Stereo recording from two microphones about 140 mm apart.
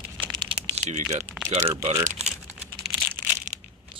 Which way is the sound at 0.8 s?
55° right (ahead or behind).